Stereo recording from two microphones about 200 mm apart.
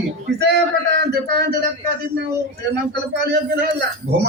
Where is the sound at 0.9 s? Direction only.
55° right (ahead or behind).